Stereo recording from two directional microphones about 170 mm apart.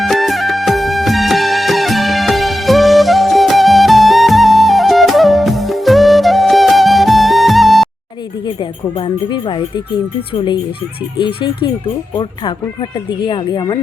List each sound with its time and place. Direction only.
0.0 s music: centre (ahead or behind)
8.4 s speech: 30° left (ahead or behind)